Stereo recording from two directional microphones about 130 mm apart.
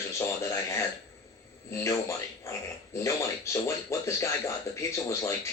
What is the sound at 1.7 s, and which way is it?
Speech, 25° left (ahead or behind).